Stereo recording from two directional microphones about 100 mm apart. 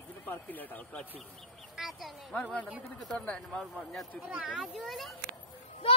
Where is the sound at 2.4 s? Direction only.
10° left (ahead or behind).